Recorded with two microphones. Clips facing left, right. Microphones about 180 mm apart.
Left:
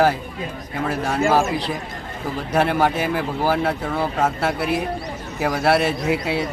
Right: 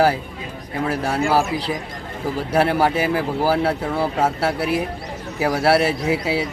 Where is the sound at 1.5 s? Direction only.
10° right (ahead or behind).